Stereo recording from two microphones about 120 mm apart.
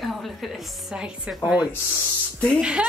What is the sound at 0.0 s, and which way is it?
A woman's voice, centre (ahead or behind).